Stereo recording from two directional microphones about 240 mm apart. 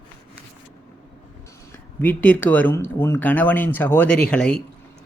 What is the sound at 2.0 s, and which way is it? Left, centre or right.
Speech, centre.